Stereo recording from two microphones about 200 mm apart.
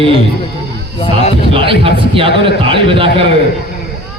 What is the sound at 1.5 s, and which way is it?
Speech, 25° right (ahead or behind).